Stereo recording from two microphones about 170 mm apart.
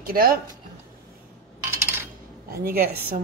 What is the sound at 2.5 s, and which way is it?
Speech, 60° right (ahead or behind).